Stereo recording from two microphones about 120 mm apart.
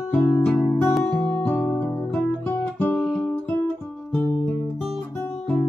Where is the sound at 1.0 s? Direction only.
15° left (ahead or behind).